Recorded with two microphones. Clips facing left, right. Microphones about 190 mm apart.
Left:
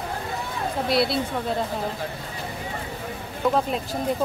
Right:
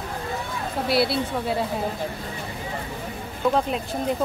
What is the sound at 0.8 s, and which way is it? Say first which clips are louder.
Speech: right 1 dB; 5° right (ahead or behind).